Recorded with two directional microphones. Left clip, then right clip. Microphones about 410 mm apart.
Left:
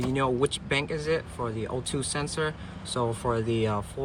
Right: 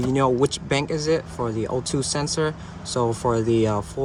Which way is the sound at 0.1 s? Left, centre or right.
Centre.